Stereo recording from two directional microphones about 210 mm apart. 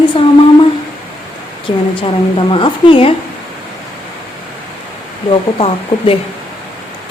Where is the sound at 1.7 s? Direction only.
25° left (ahead or behind).